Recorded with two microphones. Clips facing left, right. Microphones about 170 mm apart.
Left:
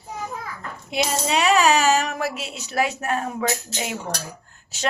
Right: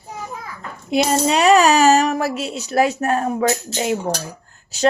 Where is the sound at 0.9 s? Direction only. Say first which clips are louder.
Right 7 dB; 45° right (ahead or behind).